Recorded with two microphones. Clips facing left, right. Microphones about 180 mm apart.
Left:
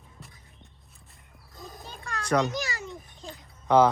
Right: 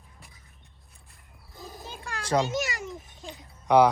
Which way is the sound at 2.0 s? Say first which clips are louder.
Even; 30° right (ahead or behind).